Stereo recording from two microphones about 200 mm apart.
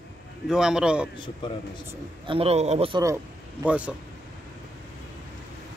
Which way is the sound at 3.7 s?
5° right (ahead or behind).